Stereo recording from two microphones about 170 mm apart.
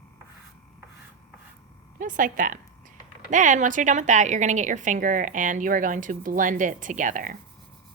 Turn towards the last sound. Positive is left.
turn(degrees=-50)  # may be behind; listen again after turning